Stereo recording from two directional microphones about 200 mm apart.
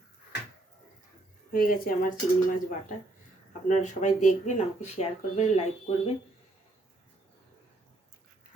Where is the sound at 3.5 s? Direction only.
35° left (ahead or behind).